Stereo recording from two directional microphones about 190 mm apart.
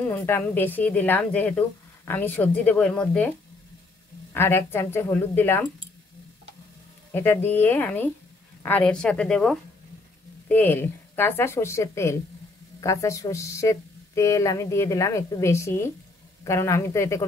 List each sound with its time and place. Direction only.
0.0 s a woman's voice: 10° left (ahead or behind)
4.3 s a woman's voice: 10° left (ahead or behind)
7.1 s a woman's voice: 10° left (ahead or behind)